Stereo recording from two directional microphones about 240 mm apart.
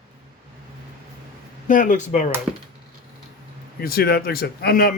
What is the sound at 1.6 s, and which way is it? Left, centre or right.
Speech, left.